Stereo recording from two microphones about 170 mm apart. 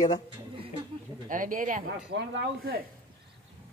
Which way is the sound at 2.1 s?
90° right.